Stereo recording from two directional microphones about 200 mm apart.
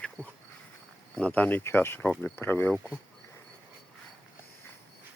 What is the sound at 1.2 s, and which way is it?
Speech, 10° left (ahead or behind).